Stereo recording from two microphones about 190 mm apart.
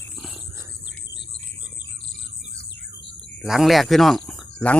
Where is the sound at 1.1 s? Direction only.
65° left (ahead or behind).